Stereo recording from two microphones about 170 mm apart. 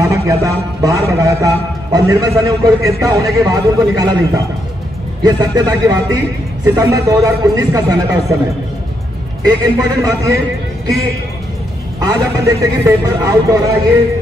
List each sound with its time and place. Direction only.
0.0 s a man's voice: 20° right (ahead or behind)
5.2 s a man's voice: 20° right (ahead or behind)
9.4 s a man's voice: 20° right (ahead or behind)
12.0 s a man's voice: 20° right (ahead or behind)